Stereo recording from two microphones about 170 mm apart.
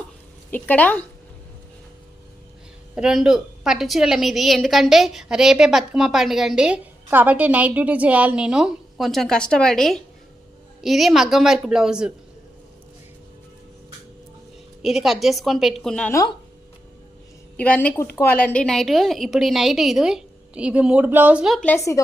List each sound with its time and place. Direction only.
0.5 s a woman's voice: 10° left (ahead or behind)
2.9 s a woman's voice: 5° right (ahead or behind)
14.8 s a woman's voice: centre (ahead or behind)
17.6 s a woman's voice: 10° left (ahead or behind)
21.7 s a woman's voice: 20° left (ahead or behind)